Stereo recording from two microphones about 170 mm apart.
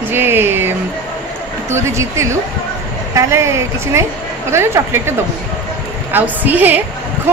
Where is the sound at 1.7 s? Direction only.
15° right (ahead or behind).